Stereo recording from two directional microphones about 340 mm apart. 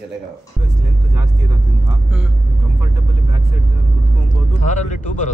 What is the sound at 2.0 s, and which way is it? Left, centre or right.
Speech, centre.